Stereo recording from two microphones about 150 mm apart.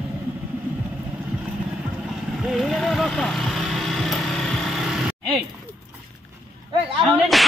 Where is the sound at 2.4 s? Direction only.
Centre (ahead or behind).